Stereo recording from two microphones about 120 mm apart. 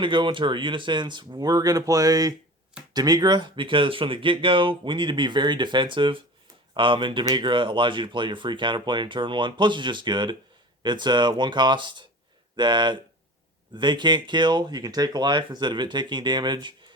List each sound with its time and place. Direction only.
0.0 s speech: 40° right (ahead or behind)